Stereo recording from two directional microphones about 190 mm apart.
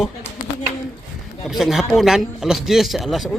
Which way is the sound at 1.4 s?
Centre (ahead or behind).